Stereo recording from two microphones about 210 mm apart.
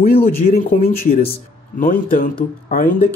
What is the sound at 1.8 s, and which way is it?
Speech, 40° left (ahead or behind).